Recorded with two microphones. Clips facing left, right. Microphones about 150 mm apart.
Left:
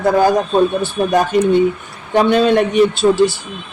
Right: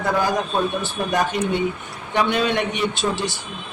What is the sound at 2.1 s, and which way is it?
Speech, 35° left (ahead or behind).